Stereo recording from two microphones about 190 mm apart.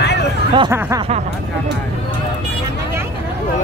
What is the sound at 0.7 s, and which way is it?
Snicker, 15° right (ahead or behind).